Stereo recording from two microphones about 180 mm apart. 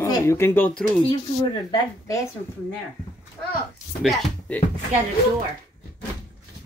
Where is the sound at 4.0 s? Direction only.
Centre (ahead or behind).